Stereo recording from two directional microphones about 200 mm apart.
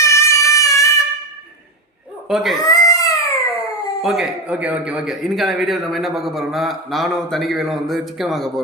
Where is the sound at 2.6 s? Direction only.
20° left (ahead or behind).